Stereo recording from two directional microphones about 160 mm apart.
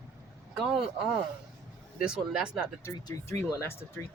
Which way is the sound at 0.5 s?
5° right (ahead or behind).